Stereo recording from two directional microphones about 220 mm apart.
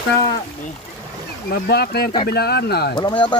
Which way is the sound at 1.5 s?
45° left (ahead or behind).